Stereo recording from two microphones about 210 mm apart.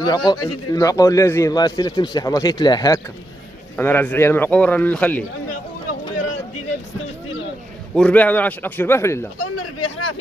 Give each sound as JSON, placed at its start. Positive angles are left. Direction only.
{"t": 0.0, "sound": "a man's voice", "side_deg": 20}
{"t": 7.9, "sound": "a man's voice", "side_deg": 5}
{"t": 9.6, "sound": "a sound", "side_deg": 90}